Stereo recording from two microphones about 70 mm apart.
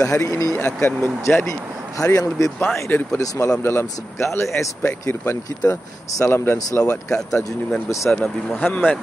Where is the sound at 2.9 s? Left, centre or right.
Left.